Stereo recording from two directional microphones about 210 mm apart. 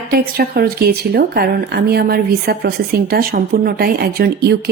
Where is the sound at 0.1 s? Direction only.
45° right (ahead or behind).